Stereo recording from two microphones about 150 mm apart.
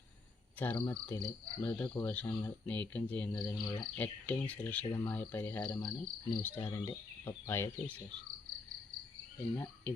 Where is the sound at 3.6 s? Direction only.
30° left (ahead or behind).